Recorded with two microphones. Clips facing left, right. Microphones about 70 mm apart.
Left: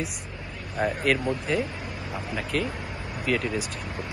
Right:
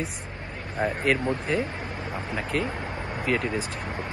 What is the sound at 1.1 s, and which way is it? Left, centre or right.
Speech, centre.